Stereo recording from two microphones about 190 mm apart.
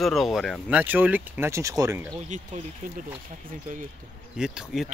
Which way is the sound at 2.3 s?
40° right (ahead or behind).